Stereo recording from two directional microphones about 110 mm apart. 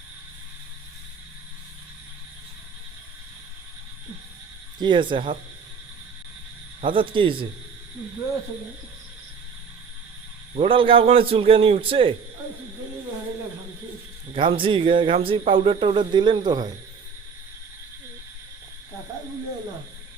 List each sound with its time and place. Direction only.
4.8 s speech: 45° right (ahead or behind)
6.8 s speech: 50° right (ahead or behind)
10.5 s a man's voice: 55° right (ahead or behind)
14.3 s speech: 50° right (ahead or behind)